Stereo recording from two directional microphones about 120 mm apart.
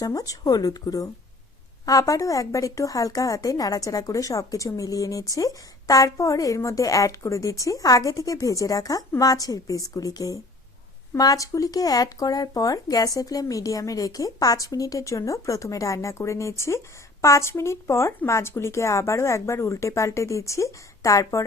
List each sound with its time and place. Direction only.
0.0 s speech: 30° left (ahead or behind)